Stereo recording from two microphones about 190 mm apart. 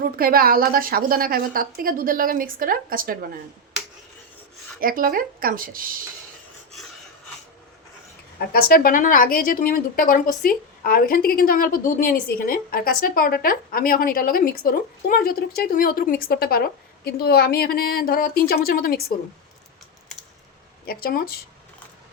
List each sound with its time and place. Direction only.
0.0 s a woman's voice: 50° right (ahead or behind)
4.8 s a woman's voice: 50° right (ahead or behind)
8.4 s a woman's voice: 50° left (ahead or behind)
20.8 s a woman's voice: 50° left (ahead or behind)